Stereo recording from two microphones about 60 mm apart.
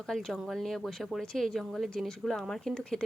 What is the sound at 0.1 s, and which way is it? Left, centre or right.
A woman's voice, centre.